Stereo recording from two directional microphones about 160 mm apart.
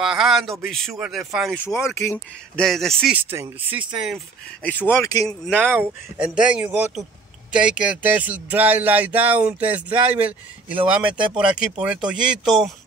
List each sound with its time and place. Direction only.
0.0 s speech: 5° right (ahead or behind)
1.6 s speech: 15° left (ahead or behind)
2.5 s speech: centre (ahead or behind)
3.2 s speech: 15° right (ahead or behind)
4.9 s speech: 20° left (ahead or behind)
5.5 s speech: 10° right (ahead or behind)